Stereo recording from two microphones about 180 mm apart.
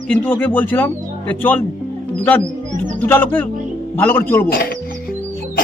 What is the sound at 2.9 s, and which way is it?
A man's voice, 10° left (ahead or behind).